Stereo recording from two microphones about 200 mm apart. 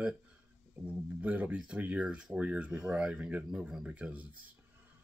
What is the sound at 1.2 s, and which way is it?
Speech, 5° right (ahead or behind).